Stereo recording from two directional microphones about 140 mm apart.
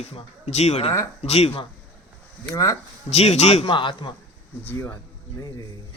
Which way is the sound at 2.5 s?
20° left (ahead or behind).